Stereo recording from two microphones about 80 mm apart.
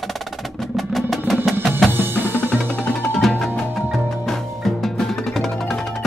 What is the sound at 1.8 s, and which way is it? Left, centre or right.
Drum, right.